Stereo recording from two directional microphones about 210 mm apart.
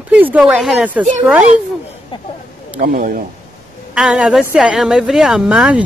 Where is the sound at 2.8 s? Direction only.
40° right (ahead or behind).